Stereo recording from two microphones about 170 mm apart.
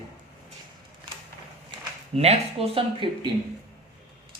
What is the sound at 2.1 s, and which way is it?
Speech, 40° right (ahead or behind).